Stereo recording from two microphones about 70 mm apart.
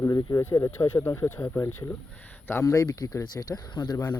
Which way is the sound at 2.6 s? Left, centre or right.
Left.